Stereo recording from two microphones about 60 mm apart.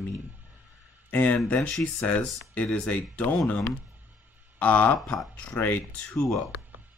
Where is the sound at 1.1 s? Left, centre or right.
Left.